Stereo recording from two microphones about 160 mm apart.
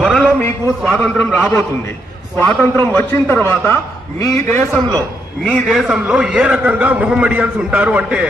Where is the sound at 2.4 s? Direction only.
10° left (ahead or behind).